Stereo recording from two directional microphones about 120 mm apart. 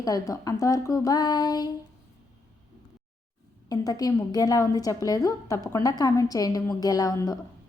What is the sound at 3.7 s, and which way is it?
A woman's voice, 30° left (ahead or behind).